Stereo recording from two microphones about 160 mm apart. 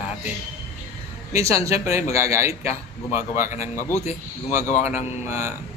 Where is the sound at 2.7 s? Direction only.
45° left (ahead or behind).